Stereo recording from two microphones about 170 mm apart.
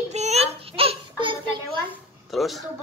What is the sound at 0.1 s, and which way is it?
Child singing, 40° right (ahead or behind).